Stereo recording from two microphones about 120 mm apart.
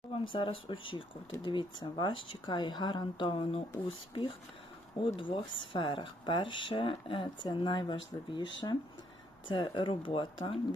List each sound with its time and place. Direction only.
0.1 s speech: 45° left (ahead or behind)